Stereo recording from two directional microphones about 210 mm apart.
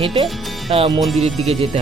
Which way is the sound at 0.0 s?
25° right (ahead or behind).